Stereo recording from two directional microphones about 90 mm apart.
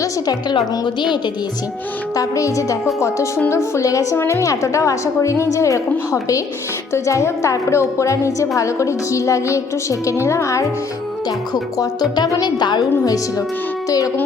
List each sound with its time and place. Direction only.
0.0 s speech: 45° left (ahead or behind)
2.1 s a woman's voice: 40° left (ahead or behind)
11.3 s speech: 45° left (ahead or behind)